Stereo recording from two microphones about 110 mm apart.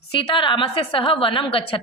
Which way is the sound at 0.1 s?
50° left (ahead or behind).